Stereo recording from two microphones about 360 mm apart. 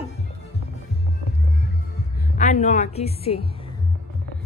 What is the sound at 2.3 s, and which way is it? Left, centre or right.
A woman's voice, centre.